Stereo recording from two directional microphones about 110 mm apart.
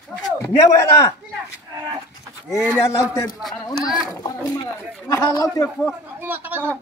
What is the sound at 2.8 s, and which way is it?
Speech, 30° left (ahead or behind).